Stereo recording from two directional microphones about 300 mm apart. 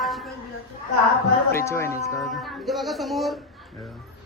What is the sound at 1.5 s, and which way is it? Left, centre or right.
A woman's voice, centre.